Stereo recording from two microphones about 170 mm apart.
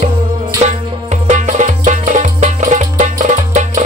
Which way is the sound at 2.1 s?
45° right (ahead or behind).